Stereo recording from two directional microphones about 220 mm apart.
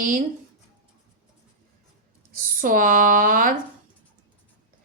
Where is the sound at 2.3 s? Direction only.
40° right (ahead or behind).